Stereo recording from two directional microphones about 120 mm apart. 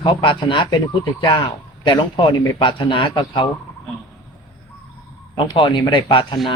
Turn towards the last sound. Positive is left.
turn(degrees=40)  # may be behind; listen again after turning